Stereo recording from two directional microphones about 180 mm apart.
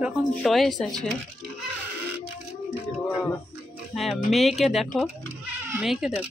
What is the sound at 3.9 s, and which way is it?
Speech, centre (ahead or behind).